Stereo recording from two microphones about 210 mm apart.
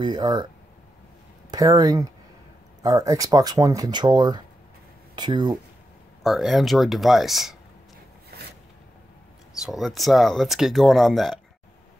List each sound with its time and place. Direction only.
0.0 s speech: 20° right (ahead or behind)
1.5 s speech: 20° right (ahead or behind)
6.2 s speech: centre (ahead or behind)
9.6 s speech: centre (ahead or behind)